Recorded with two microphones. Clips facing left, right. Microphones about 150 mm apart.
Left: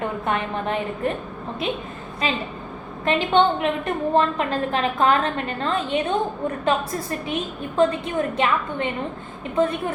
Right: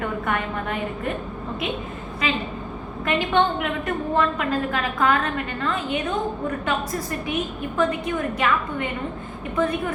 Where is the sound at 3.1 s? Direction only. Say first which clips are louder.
Left 2 dB; 25° left (ahead or behind).